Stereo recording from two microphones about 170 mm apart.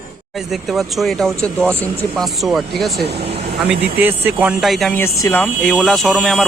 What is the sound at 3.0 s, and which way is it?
Speech, 70° right (ahead or behind).